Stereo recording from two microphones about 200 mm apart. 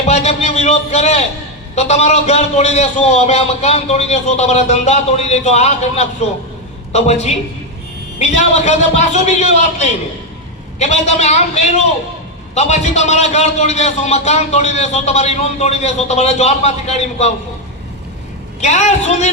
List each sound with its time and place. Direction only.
0.1 s a man's voice: 35° left (ahead or behind)
18.6 s a man's voice: 35° left (ahead or behind)